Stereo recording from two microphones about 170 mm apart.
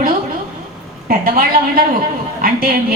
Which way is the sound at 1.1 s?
55° right (ahead or behind).